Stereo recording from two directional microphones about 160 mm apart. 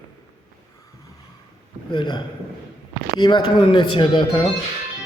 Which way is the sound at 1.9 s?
30° left (ahead or behind).